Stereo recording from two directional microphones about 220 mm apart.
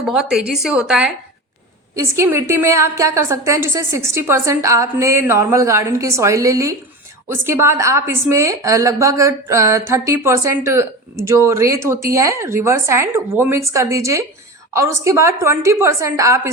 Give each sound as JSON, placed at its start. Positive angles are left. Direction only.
{"t": 0.0, "sound": "a woman's voice", "side_deg": 0}